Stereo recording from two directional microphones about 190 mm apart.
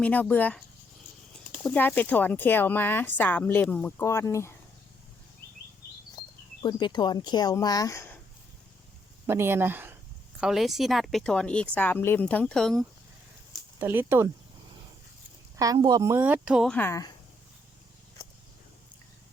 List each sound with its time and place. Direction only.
0.0 s speech: 10° left (ahead or behind)
1.6 s speech: 5° left (ahead or behind)
6.6 s speech: 25° left (ahead or behind)
9.2 s speech: 10° right (ahead or behind); by 12.7 s 5° left (ahead or behind)
13.7 s a woman's voice: 10° right (ahead or behind)
15.5 s a woman's voice: 20° right (ahead or behind)
16.7 s speech: 15° left (ahead or behind)